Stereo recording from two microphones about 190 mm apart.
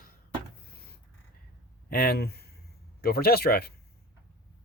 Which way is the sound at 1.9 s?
55° left (ahead or behind).